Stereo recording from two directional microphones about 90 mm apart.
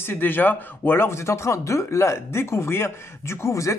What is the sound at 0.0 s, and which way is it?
Speech, 20° left (ahead or behind).